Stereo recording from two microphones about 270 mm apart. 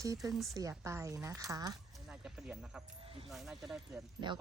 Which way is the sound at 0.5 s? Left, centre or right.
Centre.